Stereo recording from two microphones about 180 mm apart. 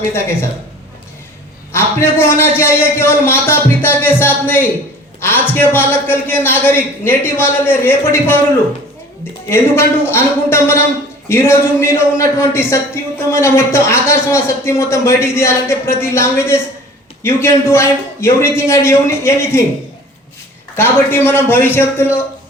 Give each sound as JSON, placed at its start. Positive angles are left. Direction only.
{"t": 0.1, "sound": "a man's voice", "side_deg": 15}
{"t": 1.7, "sound": "a man's voice", "side_deg": 15}
{"t": 9.5, "sound": "a man's voice", "side_deg": 15}
{"t": 20.7, "sound": "a man's voice", "side_deg": 10}